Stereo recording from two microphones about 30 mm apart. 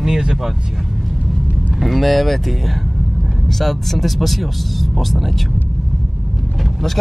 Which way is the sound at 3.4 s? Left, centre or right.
Centre.